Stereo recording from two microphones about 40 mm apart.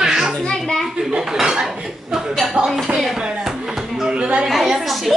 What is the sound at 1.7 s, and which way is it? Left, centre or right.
Chuckle, centre.